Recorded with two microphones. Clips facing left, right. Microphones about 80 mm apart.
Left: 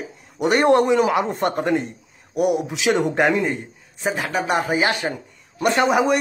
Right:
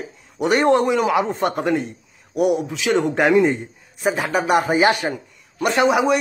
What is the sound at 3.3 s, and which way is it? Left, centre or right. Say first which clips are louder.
A man's voice: right 6 dB; centre.